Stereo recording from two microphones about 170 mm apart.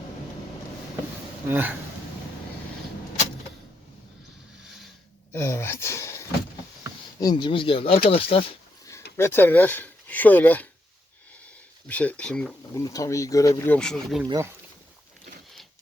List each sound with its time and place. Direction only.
1.5 s speech: 10° right (ahead or behind)
4.6 s a sound: 5° right (ahead or behind)
5.3 s a sound: 15° left (ahead or behind)
7.2 s speech: 25° left (ahead or behind)
9.1 s speech: 15° left (ahead or behind)
11.9 s speech: 10° left (ahead or behind)
12.7 s speech: 20° left (ahead or behind)
13.7 s speech: 5° left (ahead or behind)
14.3 s speech: 20° right (ahead or behind)